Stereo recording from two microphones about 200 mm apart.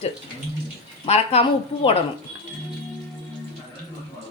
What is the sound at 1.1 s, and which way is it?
Speech, 30° left (ahead or behind).